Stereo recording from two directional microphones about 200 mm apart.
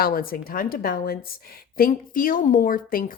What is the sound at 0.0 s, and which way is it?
Speech, 45° left (ahead or behind).